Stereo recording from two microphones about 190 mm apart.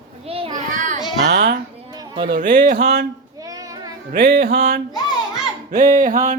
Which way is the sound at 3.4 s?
20° right (ahead or behind).